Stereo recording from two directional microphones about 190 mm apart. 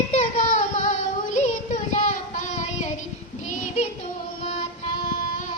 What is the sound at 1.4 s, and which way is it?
Female singing, 40° left (ahead or behind).